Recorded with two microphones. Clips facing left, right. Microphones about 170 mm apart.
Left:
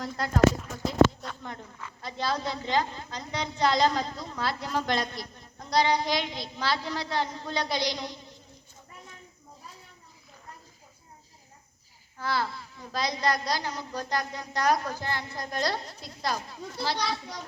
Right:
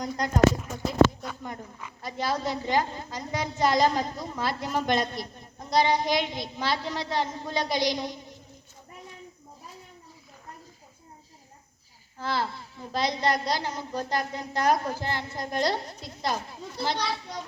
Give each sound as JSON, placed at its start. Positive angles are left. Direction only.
{"t": 0.6, "sound": "a sound", "side_deg": -5}
{"t": 3.7, "sound": "a woman's voice", "side_deg": -15}
{"t": 12.3, "sound": "a woman's voice", "side_deg": -20}